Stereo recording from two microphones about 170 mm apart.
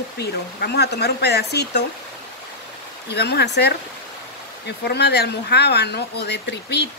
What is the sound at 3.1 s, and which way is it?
Speech, 75° left (ahead or behind).